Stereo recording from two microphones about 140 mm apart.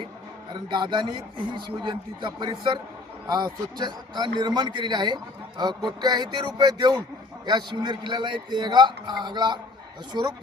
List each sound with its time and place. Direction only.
0.5 s a man's voice: 35° right (ahead or behind)